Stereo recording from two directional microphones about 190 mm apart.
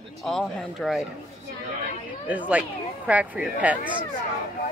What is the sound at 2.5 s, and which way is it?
A woman's voice, 5° right (ahead or behind).